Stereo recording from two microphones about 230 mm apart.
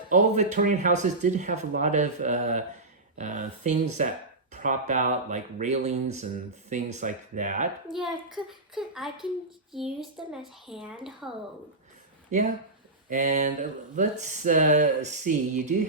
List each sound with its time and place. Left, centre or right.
0.1 s speech: right
7.9 s a woman's voice: centre
13.1 s speech: right